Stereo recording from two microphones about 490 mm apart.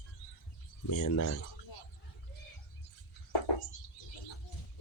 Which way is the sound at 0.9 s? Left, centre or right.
Left.